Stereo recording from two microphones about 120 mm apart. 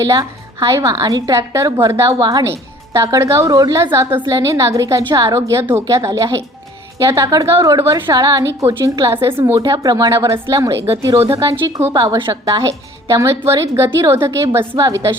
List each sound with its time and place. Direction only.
0.0 s a woman's voice: 30° right (ahead or behind)
7.9 s a woman's voice: 35° right (ahead or behind)